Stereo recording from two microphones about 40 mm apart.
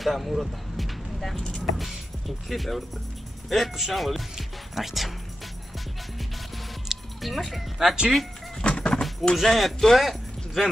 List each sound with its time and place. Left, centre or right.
0.0 s speech: centre
1.3 s speech: centre
1.6 s speech: centre
6.9 s music: centre
7.8 s speech: centre
8.6 s a sound: left
9.3 s speech: centre